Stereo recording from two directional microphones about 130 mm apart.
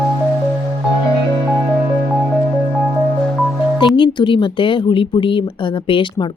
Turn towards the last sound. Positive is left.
turn(degrees=40)  # may be behind; listen again after turning